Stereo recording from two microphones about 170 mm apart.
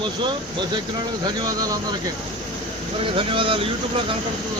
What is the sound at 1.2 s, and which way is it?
Speech, 25° right (ahead or behind).